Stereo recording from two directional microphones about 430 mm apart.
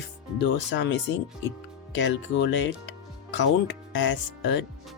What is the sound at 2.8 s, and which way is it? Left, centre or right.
Music, left.